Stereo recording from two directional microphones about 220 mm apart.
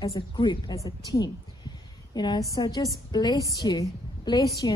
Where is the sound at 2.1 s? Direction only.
20° left (ahead or behind).